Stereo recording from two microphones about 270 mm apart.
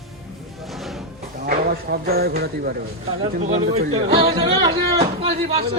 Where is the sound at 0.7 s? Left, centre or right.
Centre.